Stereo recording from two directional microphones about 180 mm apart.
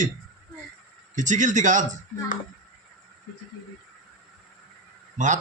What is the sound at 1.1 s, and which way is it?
Speech, 45° right (ahead or behind).